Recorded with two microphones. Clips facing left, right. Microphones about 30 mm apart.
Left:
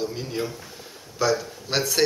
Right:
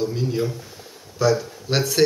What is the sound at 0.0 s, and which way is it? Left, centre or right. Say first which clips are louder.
Speech: right 5 dB; centre.